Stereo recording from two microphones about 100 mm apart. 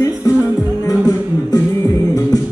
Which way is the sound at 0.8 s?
35° left (ahead or behind).